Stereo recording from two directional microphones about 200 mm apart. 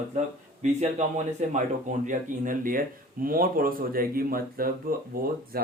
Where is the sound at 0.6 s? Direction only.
35° right (ahead or behind).